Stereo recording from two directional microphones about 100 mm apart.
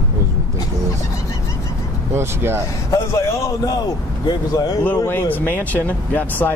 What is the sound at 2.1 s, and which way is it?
Speech, 25° right (ahead or behind).